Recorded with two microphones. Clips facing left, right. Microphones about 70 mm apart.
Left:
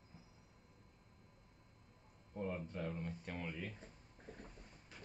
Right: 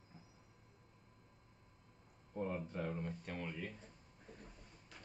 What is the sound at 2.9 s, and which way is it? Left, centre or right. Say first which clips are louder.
Speech: right 2 dB; centre.